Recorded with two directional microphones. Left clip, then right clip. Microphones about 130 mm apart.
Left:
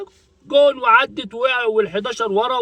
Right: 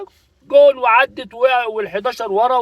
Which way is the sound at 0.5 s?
20° left (ahead or behind).